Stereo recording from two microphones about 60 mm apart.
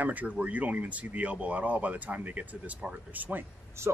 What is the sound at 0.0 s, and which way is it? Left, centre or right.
Speech, right.